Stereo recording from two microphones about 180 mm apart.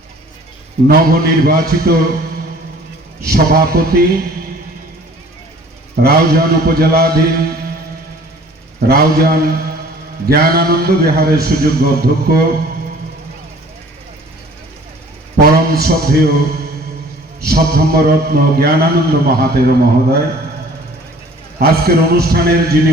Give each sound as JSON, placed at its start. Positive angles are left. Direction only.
{"t": 0.9, "sound": "a man's voice", "side_deg": -55}
{"t": 3.2, "sound": "a man's voice", "side_deg": -55}
{"t": 6.0, "sound": "a man's voice", "side_deg": -60}
{"t": 8.9, "sound": "a man's voice", "side_deg": -60}
{"t": 15.5, "sound": "a man's voice", "side_deg": -60}
{"t": 17.4, "sound": "a man's voice", "side_deg": -60}
{"t": 21.6, "sound": "a man's voice", "side_deg": -60}